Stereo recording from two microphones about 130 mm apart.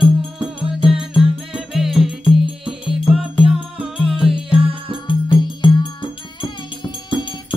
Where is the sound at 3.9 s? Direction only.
5° right (ahead or behind).